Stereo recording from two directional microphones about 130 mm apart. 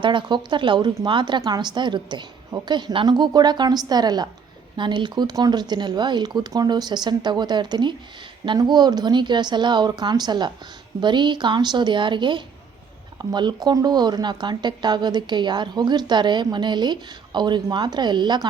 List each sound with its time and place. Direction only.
0.0 s speech: 40° right (ahead or behind)